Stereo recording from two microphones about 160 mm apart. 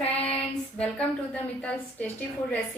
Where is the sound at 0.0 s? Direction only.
40° left (ahead or behind).